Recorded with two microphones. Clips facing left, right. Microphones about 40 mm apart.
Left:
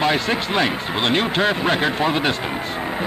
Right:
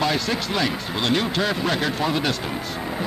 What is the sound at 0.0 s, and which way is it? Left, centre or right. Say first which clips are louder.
A man's voice: left 3 dB; left.